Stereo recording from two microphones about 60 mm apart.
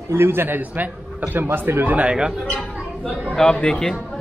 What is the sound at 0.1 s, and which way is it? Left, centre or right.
A man's voice, right.